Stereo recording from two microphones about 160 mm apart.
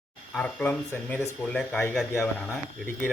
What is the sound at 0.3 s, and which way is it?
Speech, 10° left (ahead or behind).